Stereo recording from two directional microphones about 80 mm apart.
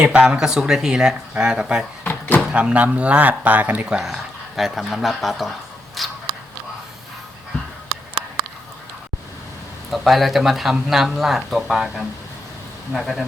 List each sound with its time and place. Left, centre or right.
0.0 s speech: centre
2.0 s door: left
2.5 s speech: centre
6.0 s biting: centre
9.9 s speech: centre